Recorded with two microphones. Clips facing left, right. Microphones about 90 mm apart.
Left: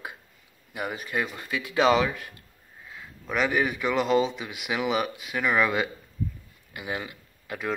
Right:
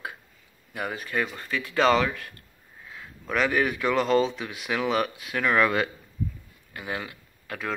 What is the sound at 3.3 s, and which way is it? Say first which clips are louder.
Speech: right 1 dB; 10° left (ahead or behind).